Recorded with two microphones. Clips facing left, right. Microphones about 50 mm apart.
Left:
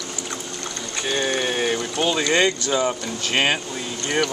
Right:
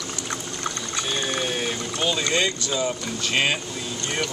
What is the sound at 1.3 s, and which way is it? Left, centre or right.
Speech, left.